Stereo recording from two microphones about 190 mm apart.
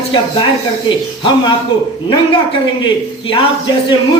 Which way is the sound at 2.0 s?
25° left (ahead or behind).